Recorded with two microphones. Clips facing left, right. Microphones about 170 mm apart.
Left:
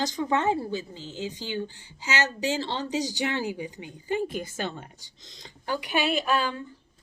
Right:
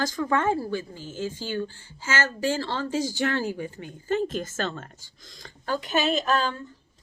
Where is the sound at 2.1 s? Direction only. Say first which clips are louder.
Right 1 dB; 50° right (ahead or behind).